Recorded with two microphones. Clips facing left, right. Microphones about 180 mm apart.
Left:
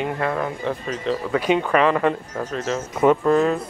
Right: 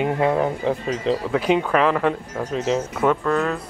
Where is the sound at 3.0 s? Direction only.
15° left (ahead or behind).